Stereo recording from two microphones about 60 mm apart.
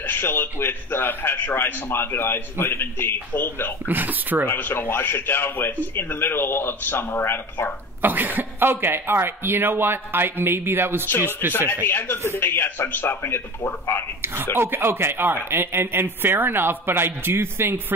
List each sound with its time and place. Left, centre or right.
0.0 s a man's voice: left
3.8 s speech: right
4.5 s a man's voice: left
8.0 s speech: right
11.1 s a man's voice: left
14.2 s speech: right